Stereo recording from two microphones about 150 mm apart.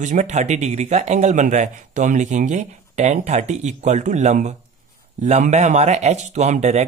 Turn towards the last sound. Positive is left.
turn(degrees=-50)  # may be behind; listen again after turning